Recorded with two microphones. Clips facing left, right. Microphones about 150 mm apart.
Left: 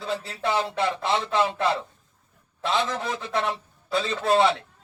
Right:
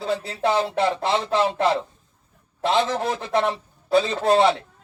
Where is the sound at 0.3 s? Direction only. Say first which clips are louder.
Right 4 dB; 35° right (ahead or behind).